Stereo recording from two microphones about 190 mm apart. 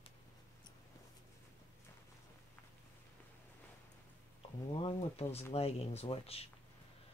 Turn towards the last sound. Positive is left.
turn(degrees=30)  # may be behind; listen again after turning